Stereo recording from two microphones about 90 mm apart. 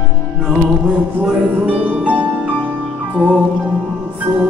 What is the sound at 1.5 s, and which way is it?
Music, 15° right (ahead or behind).